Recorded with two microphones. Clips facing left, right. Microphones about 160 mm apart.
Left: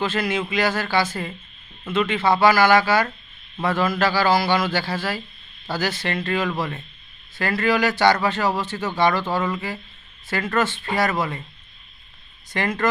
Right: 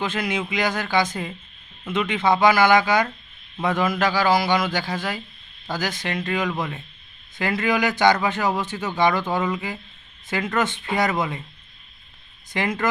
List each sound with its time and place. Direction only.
0.0 s a man's voice: 15° right (ahead or behind)
12.5 s a man's voice: 10° right (ahead or behind)